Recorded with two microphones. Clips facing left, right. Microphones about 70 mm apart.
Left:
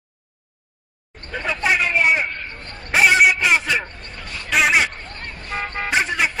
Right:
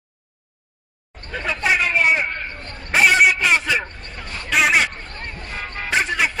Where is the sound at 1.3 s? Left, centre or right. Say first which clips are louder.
Even; centre.